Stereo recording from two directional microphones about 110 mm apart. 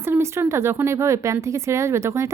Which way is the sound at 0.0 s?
25° right (ahead or behind).